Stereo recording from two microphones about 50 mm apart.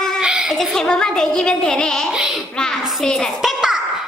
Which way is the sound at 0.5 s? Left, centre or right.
Centre.